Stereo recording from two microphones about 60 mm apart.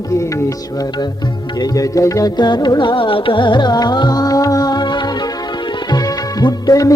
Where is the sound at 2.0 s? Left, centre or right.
Left.